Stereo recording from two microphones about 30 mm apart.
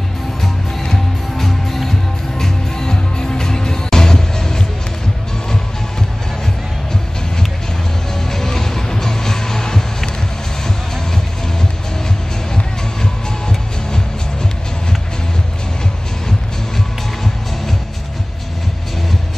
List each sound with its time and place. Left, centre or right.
0.9 s music: centre
8.3 s music: centre
13.0 s music: centre